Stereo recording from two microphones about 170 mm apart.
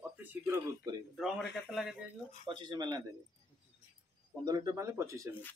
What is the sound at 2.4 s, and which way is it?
Speech, 25° right (ahead or behind).